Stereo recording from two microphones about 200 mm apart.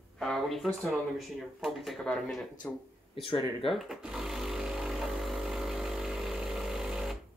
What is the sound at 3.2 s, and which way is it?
Speech, 25° left (ahead or behind).